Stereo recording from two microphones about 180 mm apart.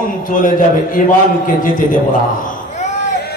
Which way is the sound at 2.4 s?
50° left (ahead or behind).